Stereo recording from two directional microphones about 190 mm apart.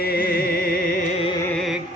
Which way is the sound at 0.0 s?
50° left (ahead or behind).